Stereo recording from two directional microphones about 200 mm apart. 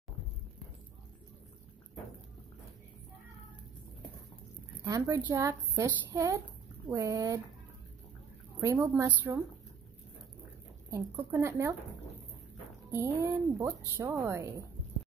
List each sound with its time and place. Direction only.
4.8 s speech: 15° right (ahead or behind)
8.5 s speech: 15° right (ahead or behind)
10.9 s speech: 15° right (ahead or behind)
12.9 s speech: 15° right (ahead or behind)